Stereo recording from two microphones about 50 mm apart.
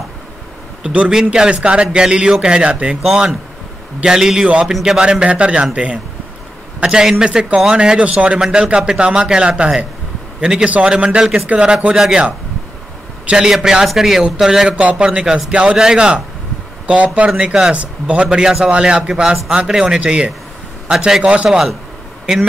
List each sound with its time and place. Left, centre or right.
0.8 s a man's voice: centre
3.0 s a man's voice: centre
21.5 s a man's voice: centre